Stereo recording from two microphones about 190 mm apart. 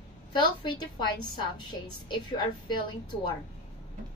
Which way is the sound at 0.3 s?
25° left (ahead or behind).